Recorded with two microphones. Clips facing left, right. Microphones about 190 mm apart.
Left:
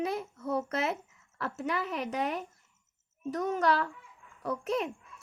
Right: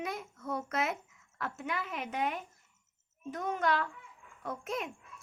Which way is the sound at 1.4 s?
35° left (ahead or behind).